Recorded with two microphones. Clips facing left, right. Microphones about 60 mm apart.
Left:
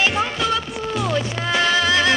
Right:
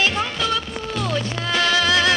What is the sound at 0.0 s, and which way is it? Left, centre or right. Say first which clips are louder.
Music: left 1 dB; centre.